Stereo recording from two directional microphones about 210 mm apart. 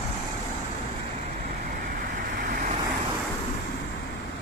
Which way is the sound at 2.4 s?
40° right (ahead or behind).